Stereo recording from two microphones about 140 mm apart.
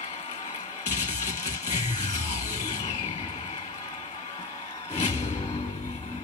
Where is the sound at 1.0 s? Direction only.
60° left (ahead or behind).